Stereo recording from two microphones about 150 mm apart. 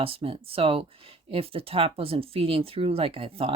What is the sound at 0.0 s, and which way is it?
Speech, 40° right (ahead or behind).